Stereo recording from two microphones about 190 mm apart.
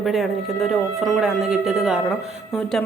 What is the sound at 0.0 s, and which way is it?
Speech, centre (ahead or behind).